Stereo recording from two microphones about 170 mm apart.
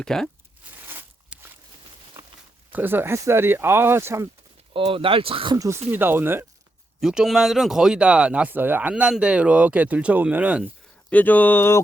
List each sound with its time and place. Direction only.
0.0 s speech: 5° left (ahead or behind)
1.3 s a sound: 5° right (ahead or behind)
2.7 s speech: 10° right (ahead or behind)
4.7 s speech: 30° right (ahead or behind)
5.5 s speech: 15° right (ahead or behind)
11.1 s speech: 10° left (ahead or behind)